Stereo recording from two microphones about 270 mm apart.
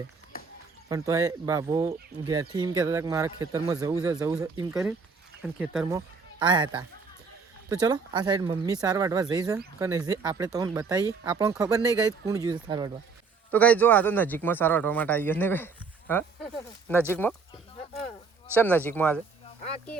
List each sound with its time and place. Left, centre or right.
0.9 s speech: centre
13.5 s speech: centre
18.5 s speech: centre